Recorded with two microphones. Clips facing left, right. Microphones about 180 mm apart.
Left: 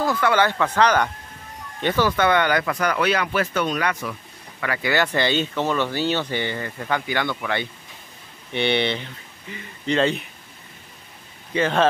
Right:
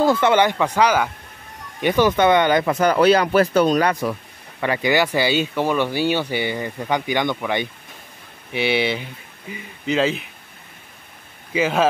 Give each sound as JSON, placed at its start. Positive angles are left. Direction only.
{"t": 0.0, "sound": "speech", "side_deg": -25}
{"t": 4.6, "sound": "speech", "side_deg": -25}
{"t": 4.9, "sound": "speech", "side_deg": -10}
{"t": 8.5, "sound": "speech", "side_deg": -5}
{"t": 11.5, "sound": "speech", "side_deg": -5}